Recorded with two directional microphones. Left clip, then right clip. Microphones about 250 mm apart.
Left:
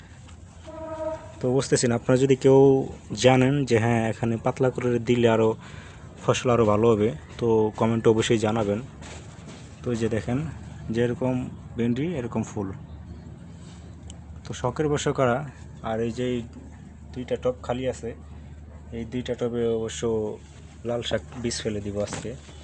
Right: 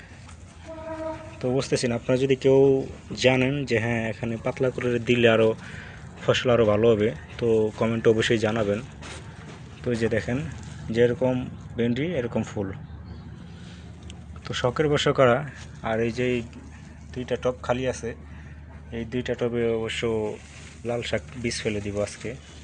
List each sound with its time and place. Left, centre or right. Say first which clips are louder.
1.4 s speech: left 2 dB; left
9.8 s speech: right 2 dB; centre
14.4 s speech: right 3 dB; centre